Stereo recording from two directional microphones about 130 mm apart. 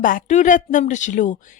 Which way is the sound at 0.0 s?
90° left.